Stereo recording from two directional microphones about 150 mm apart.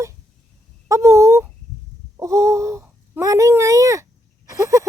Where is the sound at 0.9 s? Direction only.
20° right (ahead or behind).